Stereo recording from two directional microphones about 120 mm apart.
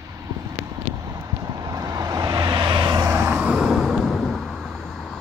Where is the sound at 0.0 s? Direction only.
25° right (ahead or behind).